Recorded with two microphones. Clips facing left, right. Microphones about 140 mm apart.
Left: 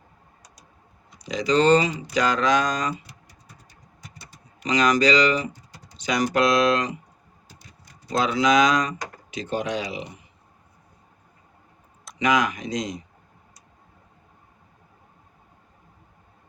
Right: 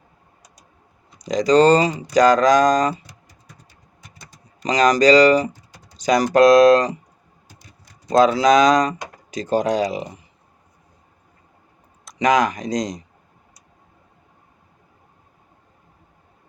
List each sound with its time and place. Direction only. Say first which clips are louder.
1.2 s speech: right 6 dB; 40° right (ahead or behind)
4.2 s speech: right 2 dB; 40° right (ahead or behind)
8.1 s speech: right 6 dB; 40° right (ahead or behind)
12.2 s speech: right 5 dB; 40° right (ahead or behind)